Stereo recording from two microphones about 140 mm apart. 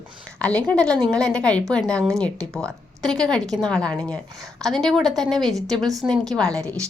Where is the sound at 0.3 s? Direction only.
10° left (ahead or behind).